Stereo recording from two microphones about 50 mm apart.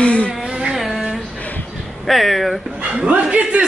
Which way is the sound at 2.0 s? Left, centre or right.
Centre.